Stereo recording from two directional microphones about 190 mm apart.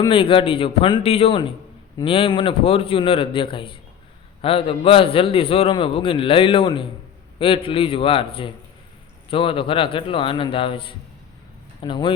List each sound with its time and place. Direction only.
0.0 s a man's voice: 25° left (ahead or behind)